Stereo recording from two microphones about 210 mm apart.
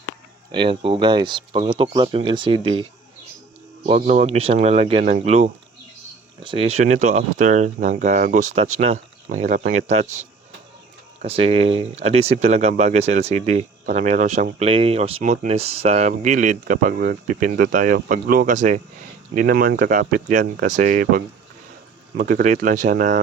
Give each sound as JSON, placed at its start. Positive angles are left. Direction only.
{"t": 0.5, "sound": "speech", "side_deg": -25}
{"t": 3.8, "sound": "speech", "side_deg": -35}